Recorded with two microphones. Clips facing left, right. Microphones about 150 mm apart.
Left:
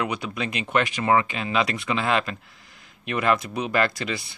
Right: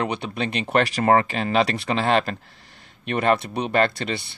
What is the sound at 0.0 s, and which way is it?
Speech, 30° right (ahead or behind).